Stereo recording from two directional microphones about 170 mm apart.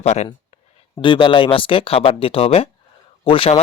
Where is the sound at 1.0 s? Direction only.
30° left (ahead or behind).